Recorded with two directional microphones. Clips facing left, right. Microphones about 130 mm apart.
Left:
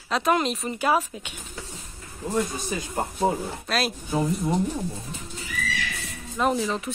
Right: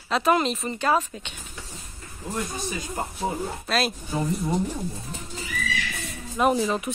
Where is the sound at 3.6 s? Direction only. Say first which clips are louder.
Right 1 dB; centre (ahead or behind).